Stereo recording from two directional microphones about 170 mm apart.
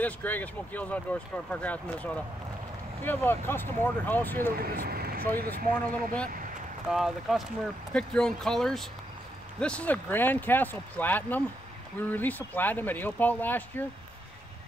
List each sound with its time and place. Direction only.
0.0 s speech: 10° left (ahead or behind)
4.6 s speech: 60° right (ahead or behind)
6.2 s a sound: 55° right (ahead or behind)
6.9 s speech: centre (ahead or behind)